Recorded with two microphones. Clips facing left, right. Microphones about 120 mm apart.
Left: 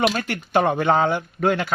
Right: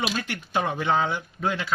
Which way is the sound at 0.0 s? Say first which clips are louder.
Left 7 dB; 55° left (ahead or behind).